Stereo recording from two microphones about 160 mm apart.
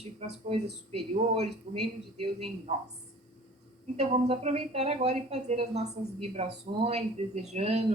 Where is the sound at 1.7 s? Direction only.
40° right (ahead or behind).